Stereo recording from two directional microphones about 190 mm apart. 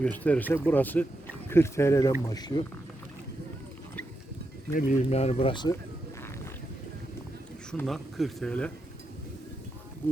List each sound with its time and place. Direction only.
0.0 s speech: 10° left (ahead or behind)
4.7 s speech: 45° left (ahead or behind); by 5.7 s 25° left (ahead or behind)
7.7 s speech: centre (ahead or behind)